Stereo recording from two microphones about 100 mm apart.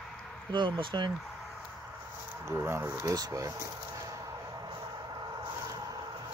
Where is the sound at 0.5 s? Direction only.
50° right (ahead or behind).